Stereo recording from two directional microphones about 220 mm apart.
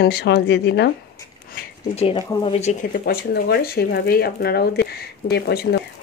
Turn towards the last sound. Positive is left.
turn(degrees=45)  # may be behind; listen again after turning